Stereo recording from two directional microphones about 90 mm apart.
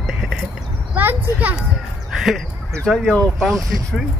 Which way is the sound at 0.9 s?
20° right (ahead or behind).